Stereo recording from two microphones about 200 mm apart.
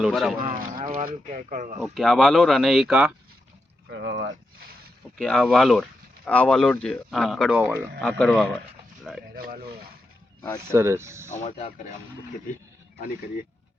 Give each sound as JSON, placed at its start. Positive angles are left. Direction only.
{"t": 0.0, "sound": "speech", "side_deg": 0}
{"t": 0.9, "sound": "speech", "side_deg": -35}
{"t": 1.8, "sound": "speech", "side_deg": 0}
{"t": 3.8, "sound": "speech", "side_deg": -60}
{"t": 5.1, "sound": "speech", "side_deg": 5}
{"t": 9.3, "sound": "speech", "side_deg": -45}
{"t": 10.7, "sound": "speech", "side_deg": -15}
{"t": 11.3, "sound": "speech", "side_deg": 35}